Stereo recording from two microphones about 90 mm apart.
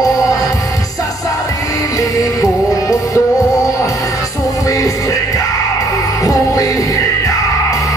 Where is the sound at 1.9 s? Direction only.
40° left (ahead or behind).